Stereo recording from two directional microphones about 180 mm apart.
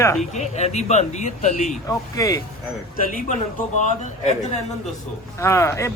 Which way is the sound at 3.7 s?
40° left (ahead or behind).